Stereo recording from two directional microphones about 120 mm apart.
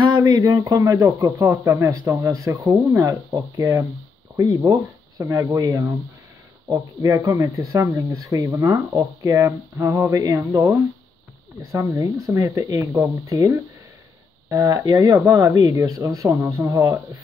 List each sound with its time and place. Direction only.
0.1 s a sound: 30° right (ahead or behind)
0.7 s speech: 30° right (ahead or behind)
4.4 s speech: 35° right (ahead or behind)
5.2 s speech: 25° right (ahead or behind)